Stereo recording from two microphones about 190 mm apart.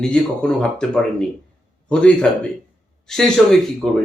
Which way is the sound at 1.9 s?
5° left (ahead or behind).